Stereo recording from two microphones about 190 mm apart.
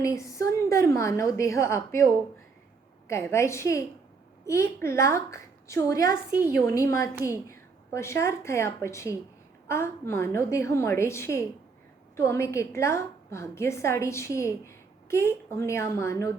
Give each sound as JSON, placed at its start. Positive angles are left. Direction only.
{"t": 0.0, "sound": "a woman's voice", "side_deg": 15}
{"t": 3.1, "sound": "a woman's voice", "side_deg": 15}